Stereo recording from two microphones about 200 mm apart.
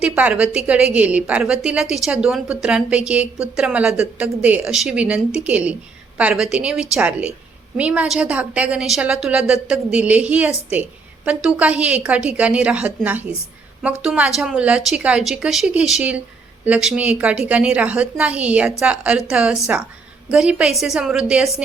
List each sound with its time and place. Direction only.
0.0 s a woman's voice: 5° right (ahead or behind)